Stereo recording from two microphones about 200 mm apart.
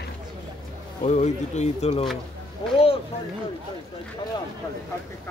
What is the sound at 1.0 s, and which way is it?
Speech, 35° left (ahead or behind).